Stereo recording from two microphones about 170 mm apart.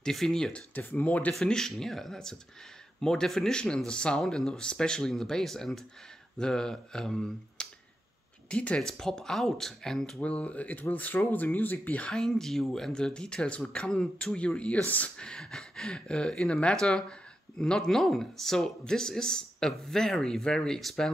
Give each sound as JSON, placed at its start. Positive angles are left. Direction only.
{"t": 0.0, "sound": "speech", "side_deg": 5}